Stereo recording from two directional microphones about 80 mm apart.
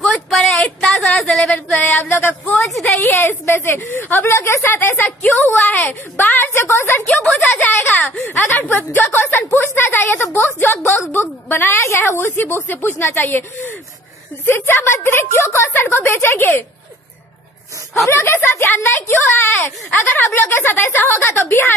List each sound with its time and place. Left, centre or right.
0.3 s a sound: centre
0.7 s speech: centre
0.9 s a sound: centre
1.3 s a woman's voice: centre
2.5 s a woman's voice: centre
3.0 s a woman's voice: left
7.6 s a sound: left
12.6 s a woman's voice: left
18.0 s a woman's voice: left